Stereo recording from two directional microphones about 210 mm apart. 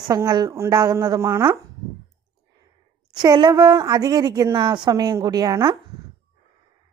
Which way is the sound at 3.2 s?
20° right (ahead or behind).